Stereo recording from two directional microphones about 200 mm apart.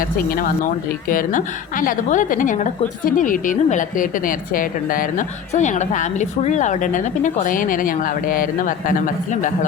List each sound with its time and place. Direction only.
0.3 s a woman's voice: 45° left (ahead or behind)